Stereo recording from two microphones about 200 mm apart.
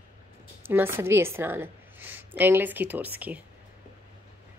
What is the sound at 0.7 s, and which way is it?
A woman's voice, 10° right (ahead or behind).